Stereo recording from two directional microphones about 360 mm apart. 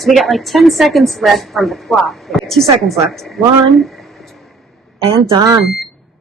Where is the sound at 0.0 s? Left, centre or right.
Centre.